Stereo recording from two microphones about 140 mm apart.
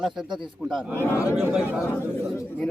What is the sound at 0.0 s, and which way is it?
Speech, 5° right (ahead or behind).